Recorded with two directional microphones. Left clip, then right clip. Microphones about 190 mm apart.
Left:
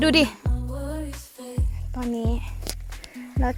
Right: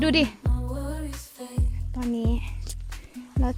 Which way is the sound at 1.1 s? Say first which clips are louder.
Left 1 dB; centre (ahead or behind).